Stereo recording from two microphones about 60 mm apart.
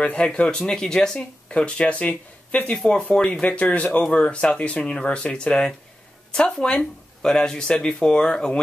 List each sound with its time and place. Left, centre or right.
0.0 s speech: centre
2.7 s speech: centre